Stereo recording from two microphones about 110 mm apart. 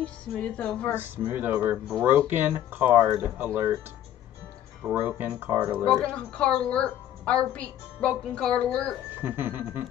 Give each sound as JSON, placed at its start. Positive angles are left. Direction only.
{"t": 0.0, "sound": "a woman's voice", "side_deg": 10}
{"t": 0.9, "sound": "speech", "side_deg": -15}
{"t": 4.8, "sound": "speech", "side_deg": -20}
{"t": 5.9, "sound": "a woman's voice", "side_deg": 5}
{"t": 9.1, "sound": "speech", "side_deg": -20}